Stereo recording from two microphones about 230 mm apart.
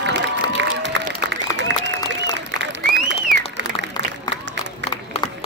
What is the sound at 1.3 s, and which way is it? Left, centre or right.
Applause, right.